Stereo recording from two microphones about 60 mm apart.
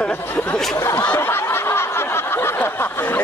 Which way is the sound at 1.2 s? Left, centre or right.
Left.